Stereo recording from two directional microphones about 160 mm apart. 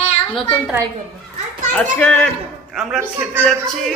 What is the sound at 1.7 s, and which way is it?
A child's voice, 10° left (ahead or behind).